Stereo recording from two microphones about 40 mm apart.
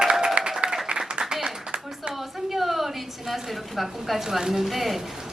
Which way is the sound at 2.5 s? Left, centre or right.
Centre.